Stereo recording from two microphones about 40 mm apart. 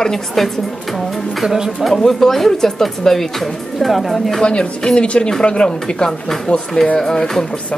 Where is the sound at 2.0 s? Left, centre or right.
Centre.